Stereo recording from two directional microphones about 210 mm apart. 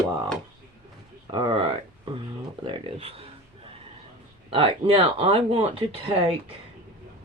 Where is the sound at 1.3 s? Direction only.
20° right (ahead or behind).